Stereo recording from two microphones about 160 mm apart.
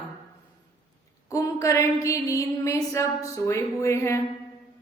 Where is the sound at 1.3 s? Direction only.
20° left (ahead or behind).